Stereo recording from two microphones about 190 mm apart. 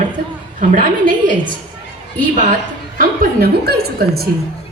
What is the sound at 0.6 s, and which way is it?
Speech, 45° right (ahead or behind).